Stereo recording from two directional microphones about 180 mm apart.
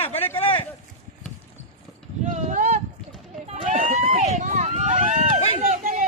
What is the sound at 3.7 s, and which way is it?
Run, 45° right (ahead or behind).